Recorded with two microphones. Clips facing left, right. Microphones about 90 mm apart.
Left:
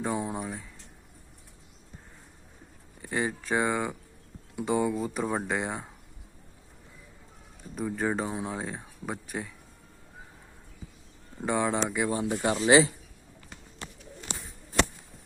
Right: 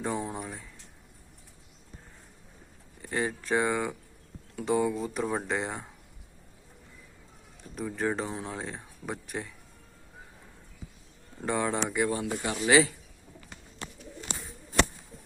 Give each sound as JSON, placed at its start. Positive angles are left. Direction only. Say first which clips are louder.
{"t": 0.0, "sound": "speech", "louder": "left 2 dB", "side_deg": 5}
{"t": 3.0, "sound": "speech", "louder": "left 1 dB", "side_deg": 5}
{"t": 7.8, "sound": "speech", "louder": "left 1 dB", "side_deg": 5}
{"t": 11.3, "sound": "speech", "louder": "left 2 dB", "side_deg": 10}
{"t": 12.1, "sound": "speech", "louder": "left 4 dB", "side_deg": 30}